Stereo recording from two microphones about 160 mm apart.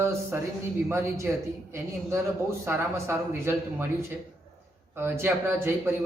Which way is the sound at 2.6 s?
15° right (ahead or behind).